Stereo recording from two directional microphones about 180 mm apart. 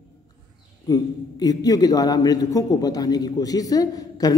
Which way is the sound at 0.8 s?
20° left (ahead or behind).